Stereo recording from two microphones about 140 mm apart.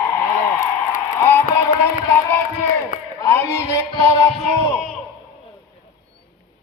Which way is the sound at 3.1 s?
20° left (ahead or behind).